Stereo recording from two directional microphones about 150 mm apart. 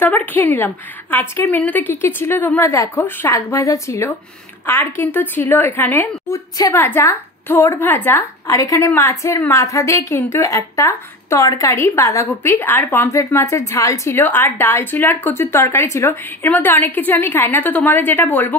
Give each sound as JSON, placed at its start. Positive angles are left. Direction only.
{"t": 0.0, "sound": "a woman's voice", "side_deg": 10}